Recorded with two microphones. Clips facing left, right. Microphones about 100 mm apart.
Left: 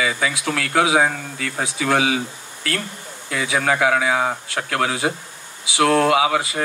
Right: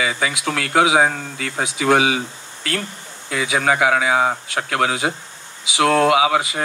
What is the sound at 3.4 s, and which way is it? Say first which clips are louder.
Speech: right 1 dB; 20° right (ahead or behind).